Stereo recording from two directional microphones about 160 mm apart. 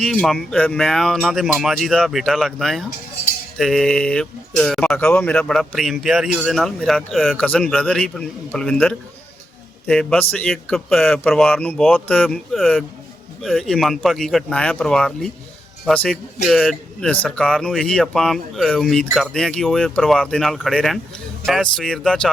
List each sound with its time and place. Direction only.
0.0 s a man's voice: 5° left (ahead or behind)